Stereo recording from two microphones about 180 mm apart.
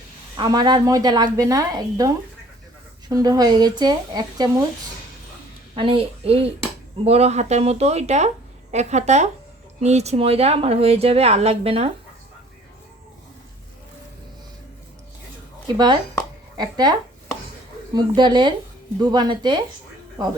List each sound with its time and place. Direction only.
0.3 s a woman's voice: 25° right (ahead or behind)
5.7 s speech: 30° right (ahead or behind)
15.6 s a woman's voice: 25° right (ahead or behind)
17.9 s a woman's voice: 25° right (ahead or behind)